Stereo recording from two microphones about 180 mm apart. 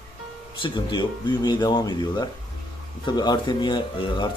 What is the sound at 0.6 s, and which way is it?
Speech, 25° left (ahead or behind).